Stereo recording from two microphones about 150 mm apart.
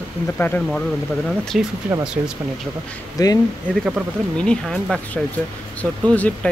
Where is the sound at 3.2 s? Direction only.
25° left (ahead or behind).